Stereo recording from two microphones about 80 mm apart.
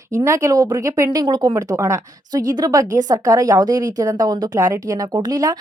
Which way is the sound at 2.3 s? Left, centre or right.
Right.